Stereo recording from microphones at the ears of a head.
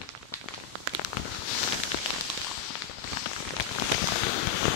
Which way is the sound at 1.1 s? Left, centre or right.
Left.